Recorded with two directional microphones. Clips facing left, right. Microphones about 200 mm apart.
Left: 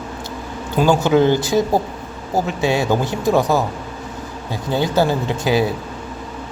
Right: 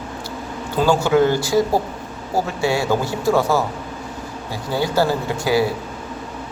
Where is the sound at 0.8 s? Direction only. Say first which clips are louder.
Left 1 dB; 20° left (ahead or behind).